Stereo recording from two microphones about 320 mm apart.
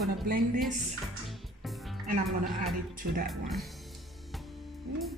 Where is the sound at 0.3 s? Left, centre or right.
Right.